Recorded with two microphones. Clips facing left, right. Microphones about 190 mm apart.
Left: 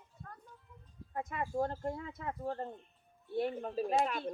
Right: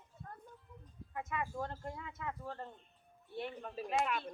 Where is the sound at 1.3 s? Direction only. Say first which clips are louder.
Left 5 dB; 40° left (ahead or behind).